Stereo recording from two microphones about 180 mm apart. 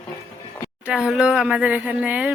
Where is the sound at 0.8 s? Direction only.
5° right (ahead or behind).